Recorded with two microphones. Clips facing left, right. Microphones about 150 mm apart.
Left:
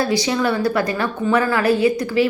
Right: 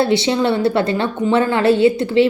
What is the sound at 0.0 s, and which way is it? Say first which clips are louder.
A woman's voice: right 3 dB; 25° right (ahead or behind).